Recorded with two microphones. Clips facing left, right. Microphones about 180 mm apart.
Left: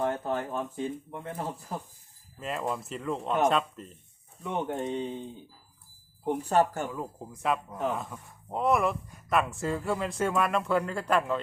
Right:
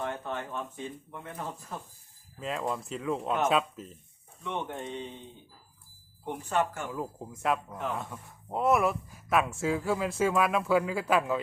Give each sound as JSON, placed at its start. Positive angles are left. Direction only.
{"t": 0.0, "sound": "a sound", "side_deg": 35}
{"t": 1.1, "sound": "speech", "side_deg": 30}
{"t": 2.4, "sound": "speech", "side_deg": 0}
{"t": 4.4, "sound": "speech", "side_deg": 40}
{"t": 6.2, "sound": "speech", "side_deg": 40}
{"t": 6.9, "sound": "speech", "side_deg": 0}